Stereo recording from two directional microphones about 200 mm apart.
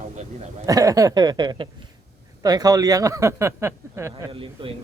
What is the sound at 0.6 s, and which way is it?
Speech, 15° right (ahead or behind).